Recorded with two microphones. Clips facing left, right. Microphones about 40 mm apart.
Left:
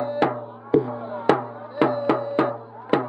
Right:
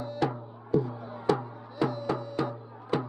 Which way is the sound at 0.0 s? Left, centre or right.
Left.